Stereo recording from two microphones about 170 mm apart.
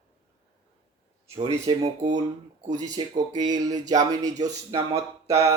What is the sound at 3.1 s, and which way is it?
Speech, 25° right (ahead or behind).